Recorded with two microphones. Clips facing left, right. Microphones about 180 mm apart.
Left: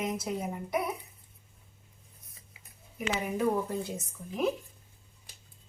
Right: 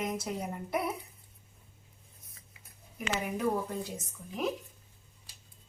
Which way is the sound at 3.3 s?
Centre (ahead or behind).